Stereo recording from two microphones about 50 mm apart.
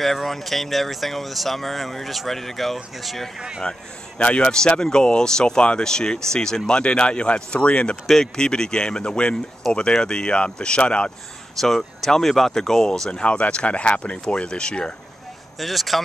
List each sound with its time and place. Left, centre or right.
0.0 s speech: centre
3.3 s speech: centre
4.2 s speech: left
11.6 s speech: centre
13.1 s speech: left
15.6 s speech: centre